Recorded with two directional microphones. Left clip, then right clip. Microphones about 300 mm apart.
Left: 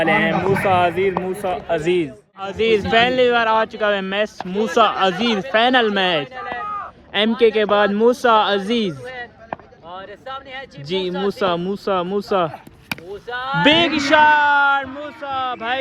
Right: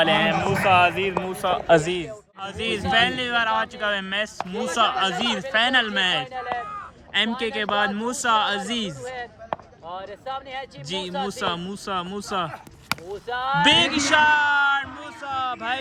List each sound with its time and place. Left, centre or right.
0.0 s speech: centre
5.1 s speech: right
5.4 s speech: centre
6.7 s a sound: centre
7.3 s speech: centre
9.0 s basketball bounce: right
10.9 s speech: right
11.3 s speech: centre
13.2 s speech: right
13.7 s speech: centre